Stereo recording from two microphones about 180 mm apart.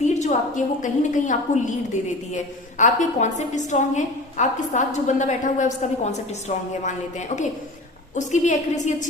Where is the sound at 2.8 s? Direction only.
40° left (ahead or behind).